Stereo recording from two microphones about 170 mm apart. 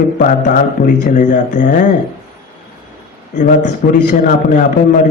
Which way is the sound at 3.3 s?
45° left (ahead or behind).